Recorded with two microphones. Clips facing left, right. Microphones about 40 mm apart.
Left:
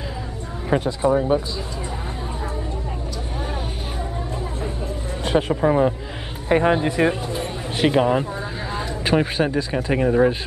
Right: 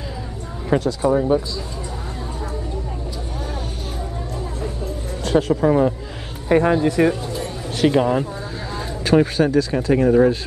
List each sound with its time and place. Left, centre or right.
0.7 s speech: left
4.8 s a sound: left
6.5 s speech: left
10.0 s speech: centre